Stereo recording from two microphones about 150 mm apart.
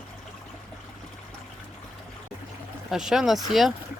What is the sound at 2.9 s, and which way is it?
Speech, 5° right (ahead or behind).